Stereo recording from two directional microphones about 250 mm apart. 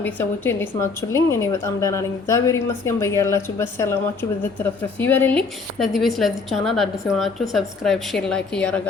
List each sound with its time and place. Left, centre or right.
0.0 s a woman's voice: centre